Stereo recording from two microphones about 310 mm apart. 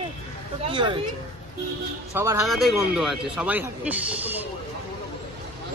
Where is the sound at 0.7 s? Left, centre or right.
Centre.